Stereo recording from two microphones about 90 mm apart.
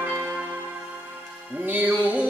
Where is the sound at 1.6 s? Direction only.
20° right (ahead or behind).